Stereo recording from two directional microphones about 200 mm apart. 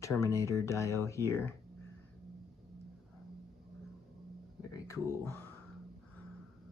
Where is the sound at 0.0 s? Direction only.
15° left (ahead or behind).